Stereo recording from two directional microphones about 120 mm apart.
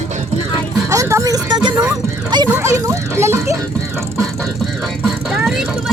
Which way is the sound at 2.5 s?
25° right (ahead or behind).